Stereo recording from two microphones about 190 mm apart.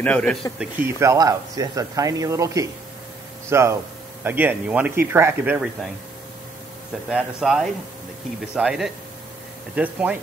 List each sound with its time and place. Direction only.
0.0 s speech: 5° left (ahead or behind)
0.7 s speech: 15° right (ahead or behind)
7.1 s speech: 5° right (ahead or behind)